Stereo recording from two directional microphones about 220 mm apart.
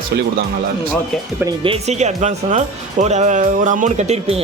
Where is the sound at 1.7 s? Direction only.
30° right (ahead or behind).